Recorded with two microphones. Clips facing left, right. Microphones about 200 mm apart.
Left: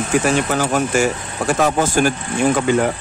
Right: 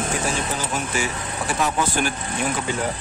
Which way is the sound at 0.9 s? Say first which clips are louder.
Left 8 dB; 45° left (ahead or behind).